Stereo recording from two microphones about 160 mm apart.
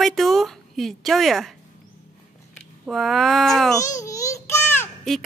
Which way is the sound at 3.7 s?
20° left (ahead or behind).